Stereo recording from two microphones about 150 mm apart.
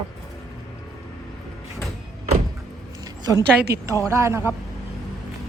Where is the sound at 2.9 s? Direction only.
25° right (ahead or behind).